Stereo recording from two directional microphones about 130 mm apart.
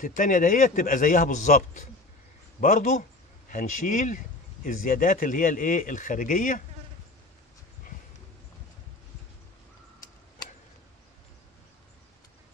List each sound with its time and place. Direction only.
0.0 s a man's voice: 90° left